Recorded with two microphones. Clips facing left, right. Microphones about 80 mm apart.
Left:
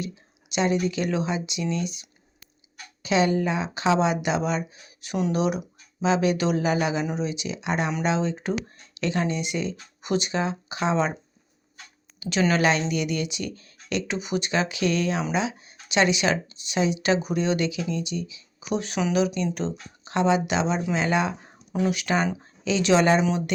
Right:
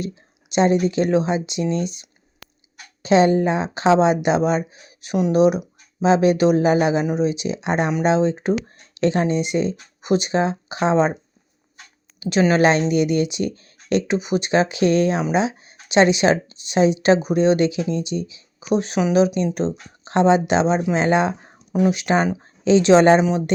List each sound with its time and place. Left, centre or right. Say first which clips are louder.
0.5 s speech: right 7 dB; right
2.4 s a sound: right 15 dB; right
3.0 s speech: right 7 dB; right
12.2 s speech: right 6 dB; right